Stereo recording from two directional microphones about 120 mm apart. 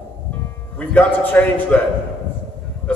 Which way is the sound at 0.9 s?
10° left (ahead or behind).